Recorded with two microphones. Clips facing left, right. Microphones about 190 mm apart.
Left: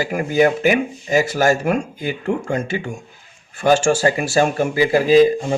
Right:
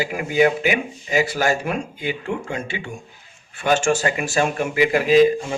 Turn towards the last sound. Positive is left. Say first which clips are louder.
# left 2 dB
turn(degrees=35)  # may be behind; listen again after turning